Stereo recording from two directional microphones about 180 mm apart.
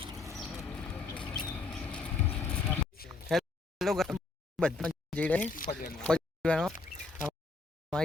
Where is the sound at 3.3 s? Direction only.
Centre (ahead or behind).